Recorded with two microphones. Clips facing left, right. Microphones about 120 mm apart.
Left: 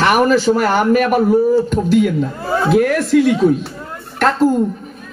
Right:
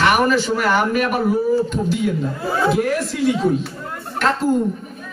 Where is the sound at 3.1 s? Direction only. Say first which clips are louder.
Left 9 dB; 90° left.